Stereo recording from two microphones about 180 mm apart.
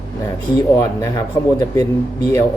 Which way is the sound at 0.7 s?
15° left (ahead or behind).